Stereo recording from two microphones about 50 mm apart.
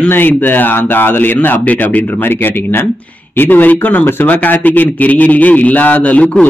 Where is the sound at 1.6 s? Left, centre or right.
Left.